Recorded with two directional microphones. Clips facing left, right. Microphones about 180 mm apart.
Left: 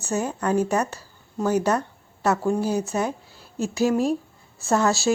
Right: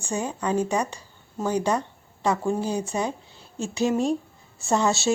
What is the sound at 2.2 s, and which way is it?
Speech, 5° left (ahead or behind).